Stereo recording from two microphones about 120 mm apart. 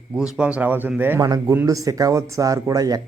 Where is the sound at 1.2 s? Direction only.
30° right (ahead or behind).